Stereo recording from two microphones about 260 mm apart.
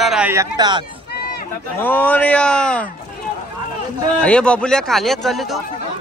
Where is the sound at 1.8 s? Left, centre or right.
Centre.